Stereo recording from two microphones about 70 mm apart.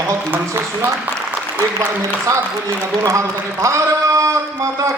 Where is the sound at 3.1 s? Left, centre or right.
Right.